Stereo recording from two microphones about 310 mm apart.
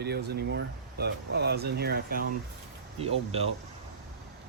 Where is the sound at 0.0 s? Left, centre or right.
Right.